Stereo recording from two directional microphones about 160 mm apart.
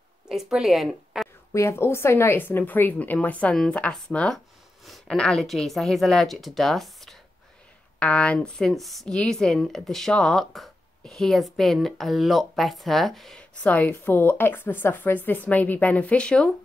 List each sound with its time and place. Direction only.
0.3 s speech: centre (ahead or behind)
1.5 s a woman's voice: 20° left (ahead or behind)